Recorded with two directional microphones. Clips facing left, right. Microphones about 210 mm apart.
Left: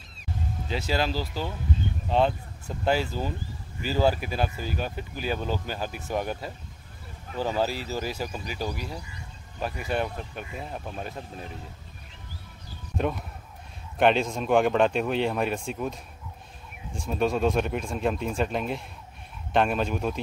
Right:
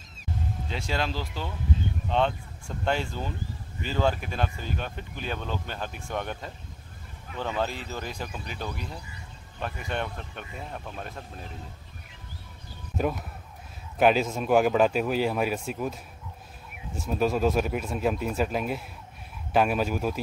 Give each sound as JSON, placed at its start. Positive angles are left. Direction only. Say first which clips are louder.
{"t": 0.7, "sound": "speech", "louder": "left 4 dB", "side_deg": 5}
{"t": 7.2, "sound": "speech", "louder": "left 3 dB", "side_deg": 35}
{"t": 7.6, "sound": "speech", "louder": "left 4 dB", "side_deg": 5}
{"t": 12.9, "sound": "speech", "louder": "even", "side_deg": -5}